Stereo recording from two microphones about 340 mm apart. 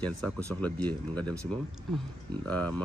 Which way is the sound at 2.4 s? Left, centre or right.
Centre.